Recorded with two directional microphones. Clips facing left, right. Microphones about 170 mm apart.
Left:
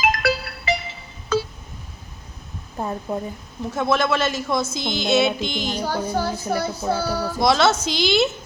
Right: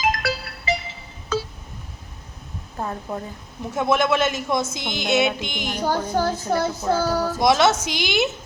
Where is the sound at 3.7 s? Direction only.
15° right (ahead or behind).